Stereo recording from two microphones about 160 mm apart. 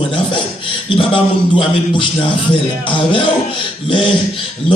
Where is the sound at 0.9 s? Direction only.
35° left (ahead or behind).